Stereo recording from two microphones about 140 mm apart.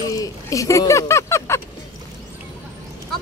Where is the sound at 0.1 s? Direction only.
25° left (ahead or behind).